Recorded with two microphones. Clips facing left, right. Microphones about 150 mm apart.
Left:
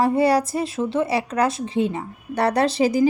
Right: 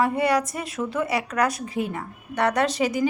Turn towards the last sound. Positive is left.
turn(degrees=35)  # may be behind; listen again after turning